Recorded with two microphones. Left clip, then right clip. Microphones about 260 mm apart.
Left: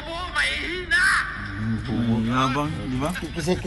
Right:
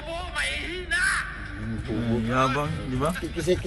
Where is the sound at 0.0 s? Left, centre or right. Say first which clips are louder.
Left 5 dB; centre.